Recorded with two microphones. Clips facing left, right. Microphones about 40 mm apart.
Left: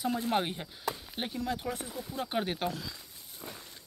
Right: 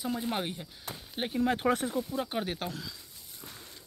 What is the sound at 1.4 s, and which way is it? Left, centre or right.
Speech, right.